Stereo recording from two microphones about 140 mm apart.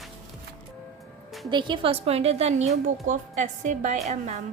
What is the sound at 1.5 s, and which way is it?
A woman's voice, 35° right (ahead or behind).